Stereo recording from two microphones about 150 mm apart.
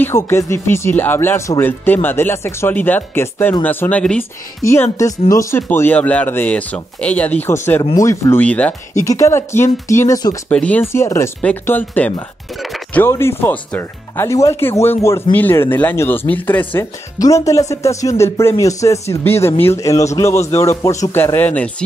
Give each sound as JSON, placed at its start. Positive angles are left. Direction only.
{"t": 0.0, "sound": "speech", "side_deg": 20}
{"t": 4.6, "sound": "speech", "side_deg": 20}
{"t": 8.9, "sound": "speech", "side_deg": 20}
{"t": 10.5, "sound": "speech", "side_deg": 10}
{"t": 12.5, "sound": "speech", "side_deg": 0}
{"t": 12.9, "sound": "speech", "side_deg": 15}